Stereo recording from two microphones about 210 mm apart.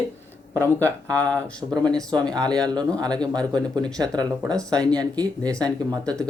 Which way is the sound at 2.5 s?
20° right (ahead or behind).